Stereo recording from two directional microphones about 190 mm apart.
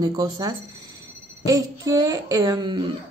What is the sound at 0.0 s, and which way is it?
A woman's voice, 20° right (ahead or behind).